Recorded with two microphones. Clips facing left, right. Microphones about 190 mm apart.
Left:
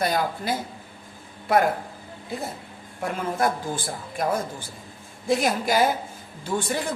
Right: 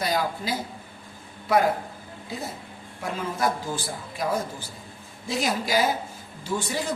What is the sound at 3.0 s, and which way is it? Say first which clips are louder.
A man's voice: left 2 dB; 55° left (ahead or behind).